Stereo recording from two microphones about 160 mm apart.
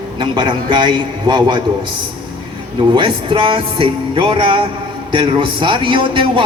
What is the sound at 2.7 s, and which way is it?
Speech, 30° right (ahead or behind).